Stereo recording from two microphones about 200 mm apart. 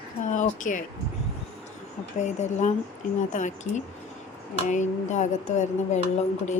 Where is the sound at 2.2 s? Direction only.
35° left (ahead or behind).